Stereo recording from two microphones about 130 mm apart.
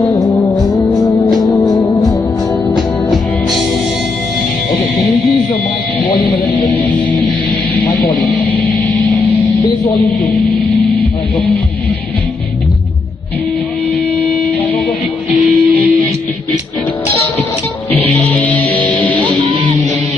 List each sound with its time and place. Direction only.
0.1 s music: 30° left (ahead or behind)
6.7 s music: 10° left (ahead or behind)
11.0 s hum: 10° left (ahead or behind)
15.4 s music: 15° right (ahead or behind)
17.9 s music: 10° left (ahead or behind)